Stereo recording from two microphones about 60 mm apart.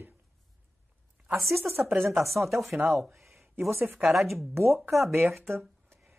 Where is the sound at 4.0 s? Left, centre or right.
Centre.